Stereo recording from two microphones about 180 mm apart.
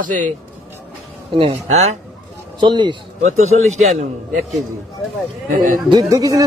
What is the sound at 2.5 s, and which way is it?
Speech, 25° right (ahead or behind).